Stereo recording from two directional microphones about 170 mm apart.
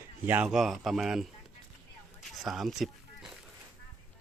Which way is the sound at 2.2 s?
Centre (ahead or behind).